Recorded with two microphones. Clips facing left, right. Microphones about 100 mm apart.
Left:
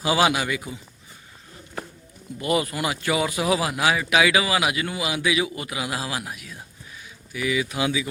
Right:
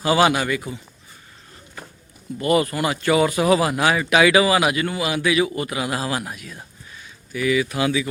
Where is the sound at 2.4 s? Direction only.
10° left (ahead or behind).